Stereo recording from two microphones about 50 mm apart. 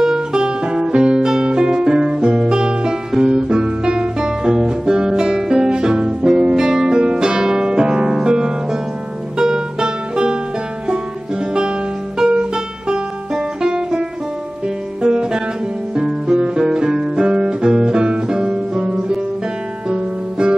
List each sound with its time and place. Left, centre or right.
0.0 s music: centre
12.2 s music: centre
16.3 s guitar: centre
19.9 s music: centre